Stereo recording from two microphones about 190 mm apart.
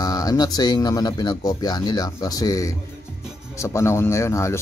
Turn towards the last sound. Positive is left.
turn(degrees=15)  # may be behind; listen again after turning